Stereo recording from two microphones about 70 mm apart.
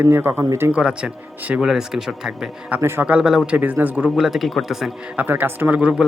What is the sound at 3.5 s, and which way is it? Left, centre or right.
Speech, right.